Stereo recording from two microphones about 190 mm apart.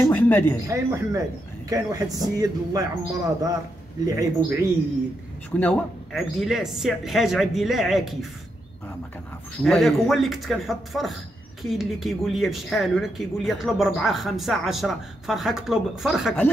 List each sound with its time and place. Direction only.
0.0 s speech: 10° left (ahead or behind)
0.7 s speech: 15° right (ahead or behind)
5.5 s speech: 5° left (ahead or behind)
9.6 s speech: centre (ahead or behind)